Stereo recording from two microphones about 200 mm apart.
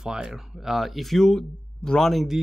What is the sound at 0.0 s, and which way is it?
Speech, 5° right (ahead or behind).